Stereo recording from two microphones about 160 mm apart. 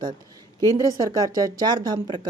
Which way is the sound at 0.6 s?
20° left (ahead or behind).